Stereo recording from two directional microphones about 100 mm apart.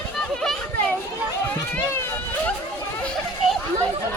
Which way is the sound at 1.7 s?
20° left (ahead or behind).